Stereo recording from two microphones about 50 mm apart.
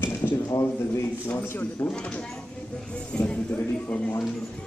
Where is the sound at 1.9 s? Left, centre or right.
Left.